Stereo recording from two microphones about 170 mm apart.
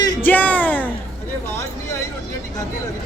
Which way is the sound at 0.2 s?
10° left (ahead or behind).